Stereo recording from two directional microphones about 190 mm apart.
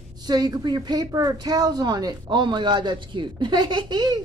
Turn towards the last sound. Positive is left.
turn(degrees=-20)  # may be behind; listen again after turning